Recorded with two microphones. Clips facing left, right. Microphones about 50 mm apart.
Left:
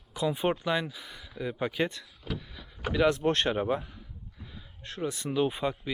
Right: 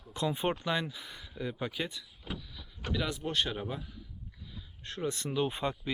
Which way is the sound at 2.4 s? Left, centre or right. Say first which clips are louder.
Left 3 dB; centre.